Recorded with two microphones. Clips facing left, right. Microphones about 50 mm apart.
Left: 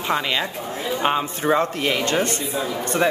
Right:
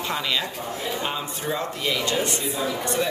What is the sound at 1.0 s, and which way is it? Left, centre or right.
Speech, left.